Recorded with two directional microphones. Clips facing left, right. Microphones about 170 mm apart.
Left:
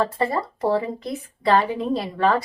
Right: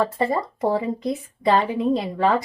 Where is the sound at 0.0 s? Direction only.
15° right (ahead or behind).